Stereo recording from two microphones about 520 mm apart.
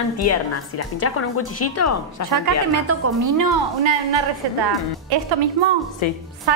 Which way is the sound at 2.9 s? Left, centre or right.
Right.